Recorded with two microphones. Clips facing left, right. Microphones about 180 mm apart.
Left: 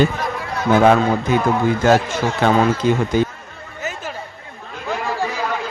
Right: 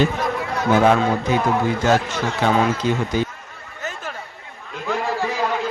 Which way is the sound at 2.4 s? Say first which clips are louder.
Left 3 dB; 55° left (ahead or behind).